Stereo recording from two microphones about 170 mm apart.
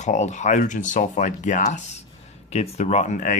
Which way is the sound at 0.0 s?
45° left (ahead or behind).